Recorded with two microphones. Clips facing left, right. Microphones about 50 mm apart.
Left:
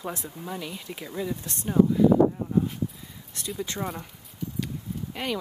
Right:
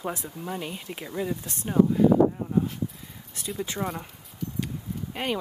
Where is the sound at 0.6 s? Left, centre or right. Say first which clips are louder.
Right 1 dB; right.